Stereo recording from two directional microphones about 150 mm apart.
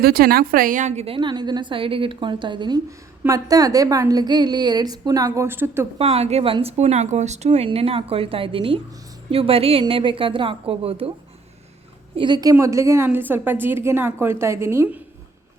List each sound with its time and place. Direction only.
0.0 s a woman's voice: 90° right; by 5.9 s 15° right (ahead or behind)
6.0 s speech: 40° right (ahead or behind)
12.1 s a woman's voice: 30° right (ahead or behind); by 15.0 s 15° right (ahead or behind)